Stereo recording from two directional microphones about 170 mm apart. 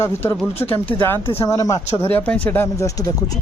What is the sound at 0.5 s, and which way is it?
Speech, 35° left (ahead or behind).